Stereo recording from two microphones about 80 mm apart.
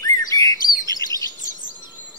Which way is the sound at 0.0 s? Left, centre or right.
Left.